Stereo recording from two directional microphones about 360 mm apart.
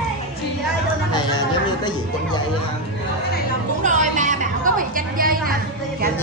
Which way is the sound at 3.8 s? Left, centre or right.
Right.